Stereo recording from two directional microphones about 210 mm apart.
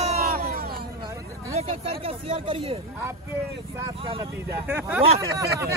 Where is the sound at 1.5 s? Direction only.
25° right (ahead or behind).